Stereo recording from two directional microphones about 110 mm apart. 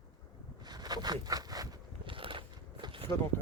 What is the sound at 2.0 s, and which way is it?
Biting, 50° right (ahead or behind).